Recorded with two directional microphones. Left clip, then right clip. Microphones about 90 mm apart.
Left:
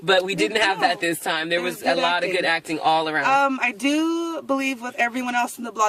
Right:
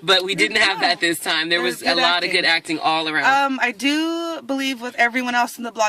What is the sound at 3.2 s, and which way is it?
Speech, 40° right (ahead or behind).